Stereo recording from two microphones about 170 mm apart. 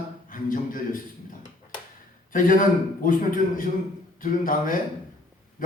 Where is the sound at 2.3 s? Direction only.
50° left (ahead or behind).